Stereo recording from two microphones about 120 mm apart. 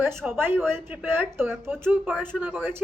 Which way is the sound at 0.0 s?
20° right (ahead or behind).